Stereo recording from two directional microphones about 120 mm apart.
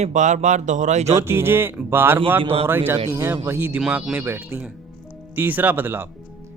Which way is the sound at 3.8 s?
5° right (ahead or behind).